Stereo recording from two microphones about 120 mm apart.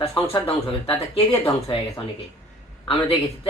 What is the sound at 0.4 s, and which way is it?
Speech, 55° left (ahead or behind).